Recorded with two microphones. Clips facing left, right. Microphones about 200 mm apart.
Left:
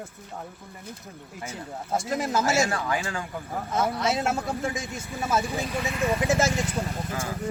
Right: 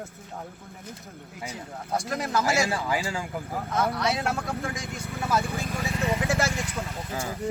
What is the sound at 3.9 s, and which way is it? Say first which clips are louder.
Speech: left 1 dB; 25° left (ahead or behind).